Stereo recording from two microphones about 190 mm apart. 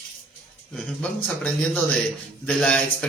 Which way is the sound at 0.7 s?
5° left (ahead or behind).